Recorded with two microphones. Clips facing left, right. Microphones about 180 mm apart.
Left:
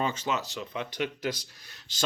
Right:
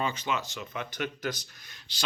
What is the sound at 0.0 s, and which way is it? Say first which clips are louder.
Speech: left 1 dB; 40° left (ahead or behind).